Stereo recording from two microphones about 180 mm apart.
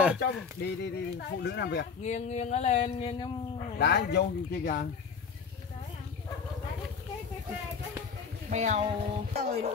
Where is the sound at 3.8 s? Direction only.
70° left (ahead or behind).